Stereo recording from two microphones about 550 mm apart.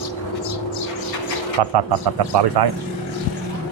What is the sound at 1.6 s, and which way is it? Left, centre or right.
Speech, right.